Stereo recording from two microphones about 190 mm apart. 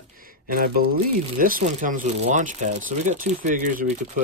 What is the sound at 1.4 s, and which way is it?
Speech, 45° right (ahead or behind).